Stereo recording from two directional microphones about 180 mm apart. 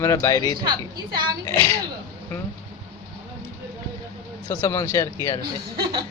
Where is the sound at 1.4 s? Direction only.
15° left (ahead or behind).